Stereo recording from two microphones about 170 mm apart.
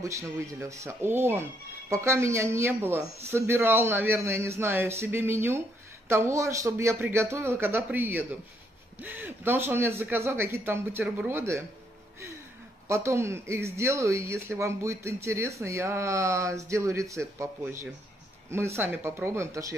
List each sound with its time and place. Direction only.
0.0 s speech: 15° right (ahead or behind)
12.8 s speech: 15° right (ahead or behind)